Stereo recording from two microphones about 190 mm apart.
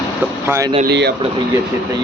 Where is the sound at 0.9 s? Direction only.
60° right (ahead or behind).